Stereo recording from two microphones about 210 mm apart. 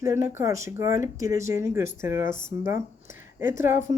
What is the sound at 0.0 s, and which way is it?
Speech, 15° right (ahead or behind).